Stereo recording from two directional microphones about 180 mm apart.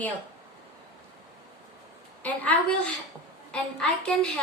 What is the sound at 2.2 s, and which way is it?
A woman's voice, 10° left (ahead or behind).